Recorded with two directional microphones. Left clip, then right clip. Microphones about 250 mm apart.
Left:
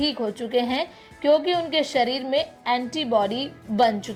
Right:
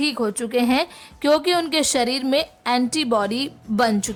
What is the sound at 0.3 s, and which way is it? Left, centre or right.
A woman's voice, centre.